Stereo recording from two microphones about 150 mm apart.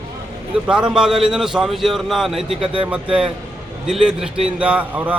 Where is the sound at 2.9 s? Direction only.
5° right (ahead or behind).